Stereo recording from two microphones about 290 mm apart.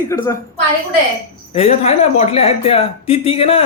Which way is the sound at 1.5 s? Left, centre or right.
Left.